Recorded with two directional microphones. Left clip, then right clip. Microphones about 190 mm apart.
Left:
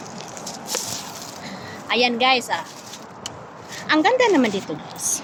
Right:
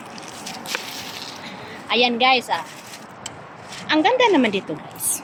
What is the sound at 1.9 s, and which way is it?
Speech, 20° right (ahead or behind).